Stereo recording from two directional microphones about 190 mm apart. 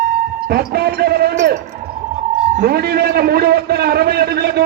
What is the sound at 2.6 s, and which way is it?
A man's voice, 55° right (ahead or behind).